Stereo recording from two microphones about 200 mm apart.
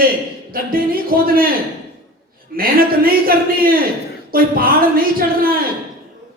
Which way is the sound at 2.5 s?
45° right (ahead or behind).